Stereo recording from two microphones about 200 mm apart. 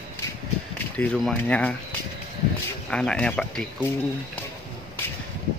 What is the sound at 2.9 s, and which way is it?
Speech, 5° left (ahead or behind).